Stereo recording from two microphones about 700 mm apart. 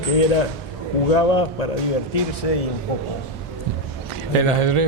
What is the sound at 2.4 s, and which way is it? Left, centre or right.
Speech, left.